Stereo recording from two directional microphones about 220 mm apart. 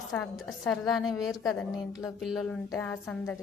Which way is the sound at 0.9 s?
20° left (ahead or behind).